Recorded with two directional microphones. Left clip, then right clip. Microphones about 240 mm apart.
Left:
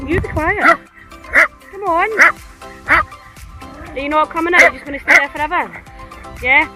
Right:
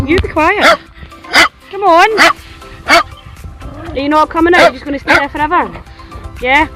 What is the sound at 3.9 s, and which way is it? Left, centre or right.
Speech, centre.